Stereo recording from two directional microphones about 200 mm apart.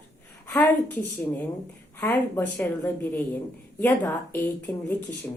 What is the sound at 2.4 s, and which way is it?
A woman's voice, 10° left (ahead or behind).